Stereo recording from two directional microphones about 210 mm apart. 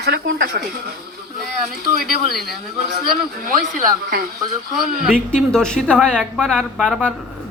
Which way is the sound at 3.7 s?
45° right (ahead or behind).